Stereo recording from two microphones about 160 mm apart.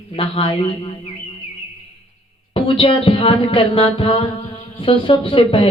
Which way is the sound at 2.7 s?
35° left (ahead or behind).